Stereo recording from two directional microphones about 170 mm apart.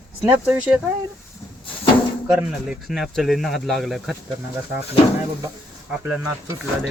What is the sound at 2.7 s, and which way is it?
Speech, centre (ahead or behind).